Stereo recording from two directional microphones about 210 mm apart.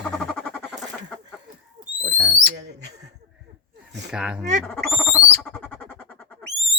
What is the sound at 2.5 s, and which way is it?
Speech, 55° right (ahead or behind).